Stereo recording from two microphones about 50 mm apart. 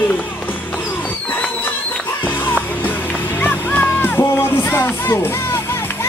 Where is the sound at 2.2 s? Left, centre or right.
Left.